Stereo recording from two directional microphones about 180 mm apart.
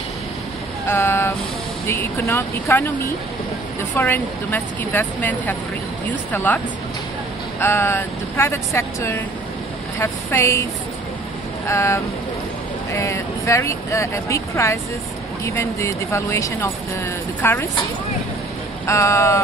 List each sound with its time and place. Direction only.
0.8 s speech: 15° left (ahead or behind)
3.9 s speech: 10° left (ahead or behind)
7.6 s speech: 15° left (ahead or behind)
11.6 s speech: 15° left (ahead or behind)
18.9 s speech: 15° left (ahead or behind)